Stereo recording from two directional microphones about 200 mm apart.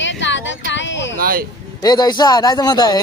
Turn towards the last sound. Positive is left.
turn(degrees=20)  # may be behind; listen again after turning